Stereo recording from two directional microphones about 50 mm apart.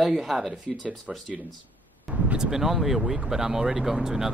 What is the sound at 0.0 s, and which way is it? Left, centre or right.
Speech, centre.